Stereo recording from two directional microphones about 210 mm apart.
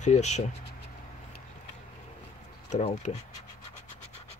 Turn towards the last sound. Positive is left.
turn(degrees=30)  # may be behind; listen again after turning